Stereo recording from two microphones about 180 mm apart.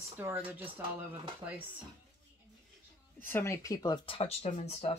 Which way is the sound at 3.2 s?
15° left (ahead or behind).